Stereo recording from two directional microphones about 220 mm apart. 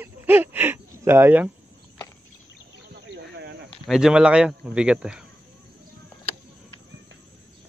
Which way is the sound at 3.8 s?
Centre (ahead or behind).